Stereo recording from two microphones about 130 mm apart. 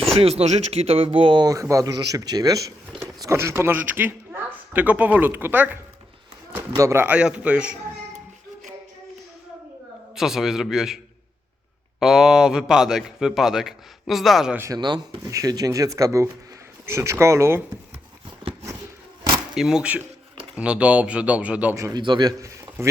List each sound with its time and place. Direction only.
0.2 s speech: 50° right (ahead or behind); by 7.8 s 10° right (ahead or behind)
10.2 s a man's voice: 5° right (ahead or behind)
14.5 s speech: 20° right (ahead or behind)
14.8 s speech: 35° right (ahead or behind)
19.5 s a man's voice: 5° right (ahead or behind)
21.9 s speech: 35° right (ahead or behind)